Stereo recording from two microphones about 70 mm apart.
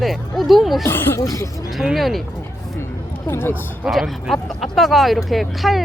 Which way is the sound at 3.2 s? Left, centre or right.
Left.